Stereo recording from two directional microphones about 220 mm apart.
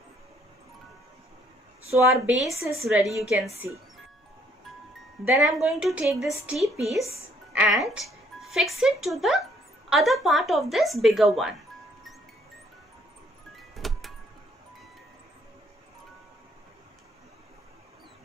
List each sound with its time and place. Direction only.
2.0 s a woman's voice: centre (ahead or behind)
5.2 s a woman's voice: 5° right (ahead or behind)
13.6 s music: centre (ahead or behind)